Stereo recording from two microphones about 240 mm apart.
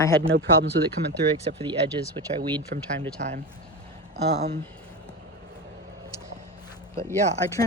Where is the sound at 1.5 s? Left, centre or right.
Right.